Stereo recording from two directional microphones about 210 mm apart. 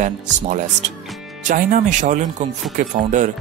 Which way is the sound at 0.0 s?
35° right (ahead or behind).